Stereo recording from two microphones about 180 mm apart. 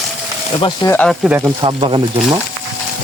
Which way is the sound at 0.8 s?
10° left (ahead or behind).